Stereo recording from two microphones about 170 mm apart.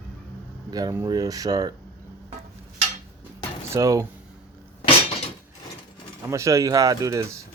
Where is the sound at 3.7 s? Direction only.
20° right (ahead or behind).